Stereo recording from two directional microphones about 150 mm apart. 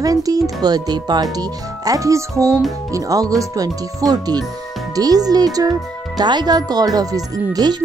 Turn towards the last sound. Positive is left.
turn(degrees=-25)  # may be behind; listen again after turning